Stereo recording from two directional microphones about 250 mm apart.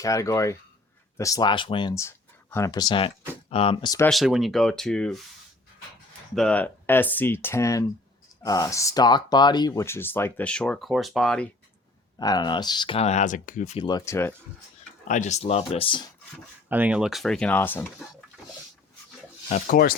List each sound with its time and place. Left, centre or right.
0.0 s speech: centre
4.1 s speech: centre
6.3 s speech: centre
12.2 s speech: centre
15.0 s speech: left
16.6 s speech: centre
19.5 s speech: left